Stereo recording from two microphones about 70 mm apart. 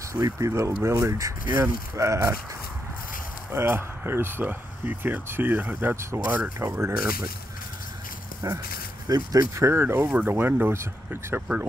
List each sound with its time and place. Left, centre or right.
0.1 s speech: right
3.5 s speech: right
5.9 s speech: right
8.4 s speech: right
9.7 s speech: right